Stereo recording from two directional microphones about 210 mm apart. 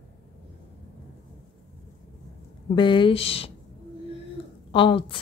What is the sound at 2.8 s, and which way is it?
Speech, 25° left (ahead or behind).